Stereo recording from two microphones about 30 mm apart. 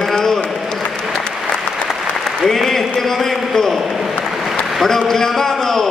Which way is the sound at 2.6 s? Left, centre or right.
Centre.